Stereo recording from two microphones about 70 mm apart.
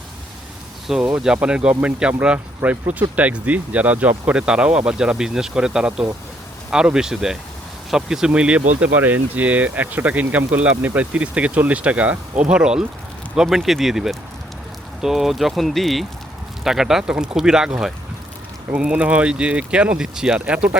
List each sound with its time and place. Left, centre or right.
0.9 s speech: centre
2.6 s speech: right